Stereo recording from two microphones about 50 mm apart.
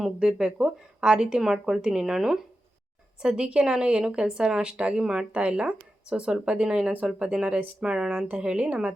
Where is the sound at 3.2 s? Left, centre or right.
Centre.